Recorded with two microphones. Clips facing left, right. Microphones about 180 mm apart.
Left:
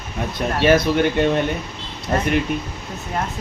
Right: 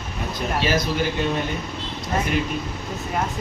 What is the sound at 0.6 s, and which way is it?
Speech, 60° left (ahead or behind).